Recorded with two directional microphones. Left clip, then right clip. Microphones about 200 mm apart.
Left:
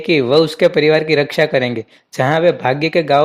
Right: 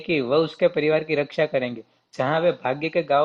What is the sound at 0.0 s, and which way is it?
Speech, 50° left (ahead or behind).